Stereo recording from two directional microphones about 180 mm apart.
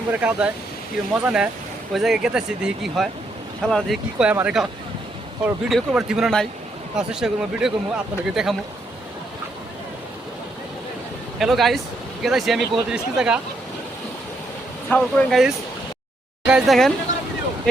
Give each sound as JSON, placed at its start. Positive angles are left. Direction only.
{"t": 0.1, "sound": "speech", "side_deg": -5}
{"t": 11.3, "sound": "speech", "side_deg": 0}
{"t": 14.8, "sound": "speech", "side_deg": 0}